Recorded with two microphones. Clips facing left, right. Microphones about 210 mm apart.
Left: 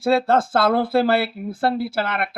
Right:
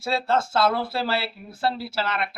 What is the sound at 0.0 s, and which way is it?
Speech, 55° left (ahead or behind).